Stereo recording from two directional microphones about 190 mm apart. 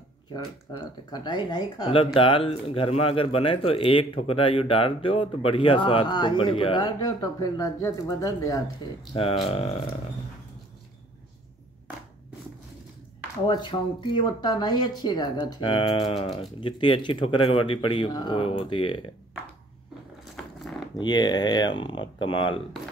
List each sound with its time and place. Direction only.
0.3 s speech: 20° left (ahead or behind)
9.1 s speech: 30° left (ahead or behind)
13.5 s speech: 25° left (ahead or behind)
20.5 s a sound: centre (ahead or behind)
21.0 s speech: 20° left (ahead or behind)